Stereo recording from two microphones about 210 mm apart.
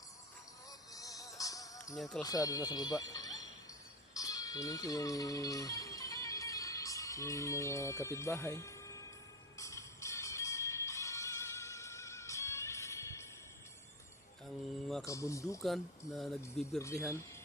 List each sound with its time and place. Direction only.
0.9 s music: 15° left (ahead or behind)
2.0 s speech: centre (ahead or behind)
2.2 s speech: 15° left (ahead or behind)
4.1 s music: 15° left (ahead or behind)
15.0 s speech: 15° left (ahead or behind)
15.6 s speech: centre (ahead or behind)
16.8 s speech: 15° left (ahead or behind)